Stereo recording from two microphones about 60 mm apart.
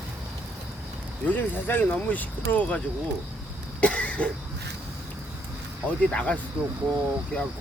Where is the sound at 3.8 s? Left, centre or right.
Centre.